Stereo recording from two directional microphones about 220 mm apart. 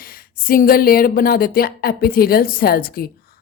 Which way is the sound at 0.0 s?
40° left (ahead or behind).